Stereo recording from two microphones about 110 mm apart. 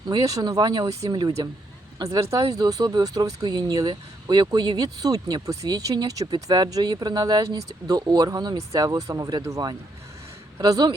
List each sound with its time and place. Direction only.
0.1 s speech: 35° right (ahead or behind)